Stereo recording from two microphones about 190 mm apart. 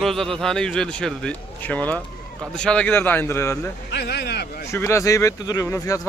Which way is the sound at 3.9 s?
60° left (ahead or behind).